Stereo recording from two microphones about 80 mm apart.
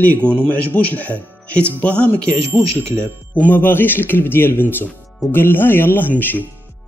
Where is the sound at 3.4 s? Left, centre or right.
Left.